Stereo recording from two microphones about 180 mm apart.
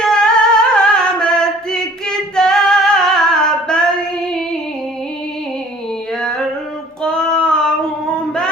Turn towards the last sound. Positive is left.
turn(degrees=5)  # may be behind; listen again after turning